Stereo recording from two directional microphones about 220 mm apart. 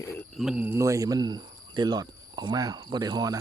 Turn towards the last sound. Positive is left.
turn(degrees=-20)  # may be behind; listen again after turning